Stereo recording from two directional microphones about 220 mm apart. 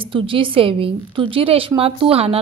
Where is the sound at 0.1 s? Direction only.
25° right (ahead or behind).